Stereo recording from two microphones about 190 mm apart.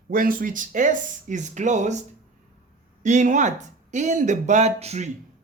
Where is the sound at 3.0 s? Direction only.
40° right (ahead or behind).